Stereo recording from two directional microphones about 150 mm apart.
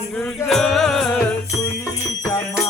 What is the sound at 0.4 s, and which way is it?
Music, centre (ahead or behind).